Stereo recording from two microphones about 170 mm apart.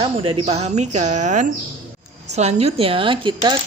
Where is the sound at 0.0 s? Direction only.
30° right (ahead or behind).